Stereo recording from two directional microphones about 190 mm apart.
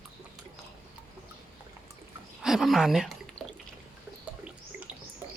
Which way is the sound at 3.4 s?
30° left (ahead or behind).